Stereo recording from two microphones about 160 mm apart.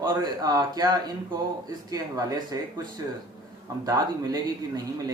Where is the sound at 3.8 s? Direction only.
25° right (ahead or behind).